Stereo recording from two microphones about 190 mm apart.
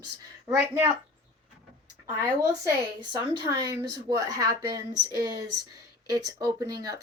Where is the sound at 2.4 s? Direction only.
20° right (ahead or behind).